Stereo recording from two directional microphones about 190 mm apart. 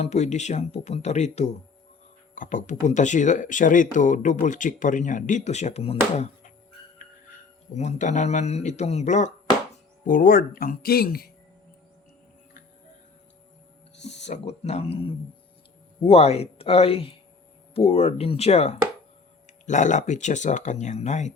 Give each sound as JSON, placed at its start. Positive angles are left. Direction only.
{"t": 0.0, "sound": "speech", "side_deg": 35}
{"t": 7.8, "sound": "speech", "side_deg": 40}
{"t": 14.0, "sound": "speech", "side_deg": 35}